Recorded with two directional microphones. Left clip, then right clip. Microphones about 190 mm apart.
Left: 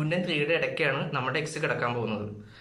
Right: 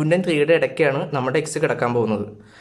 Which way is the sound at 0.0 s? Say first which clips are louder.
Right 9 dB; 40° right (ahead or behind).